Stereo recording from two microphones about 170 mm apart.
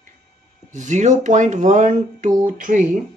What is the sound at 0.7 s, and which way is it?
Speech, 45° right (ahead or behind).